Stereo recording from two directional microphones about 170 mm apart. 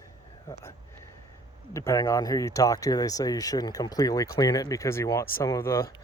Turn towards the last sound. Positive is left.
turn(degrees=15)  # may be behind; listen again after turning